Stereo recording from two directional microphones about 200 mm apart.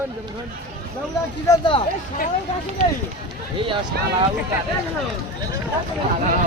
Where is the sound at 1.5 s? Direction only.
25° left (ahead or behind).